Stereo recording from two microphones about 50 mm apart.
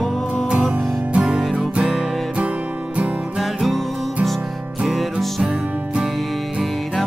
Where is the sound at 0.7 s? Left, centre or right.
Right.